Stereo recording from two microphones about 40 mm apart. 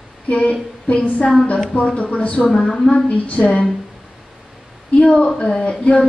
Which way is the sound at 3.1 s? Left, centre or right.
Left.